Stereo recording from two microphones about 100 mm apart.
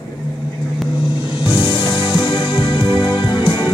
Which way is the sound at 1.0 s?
60° left (ahead or behind).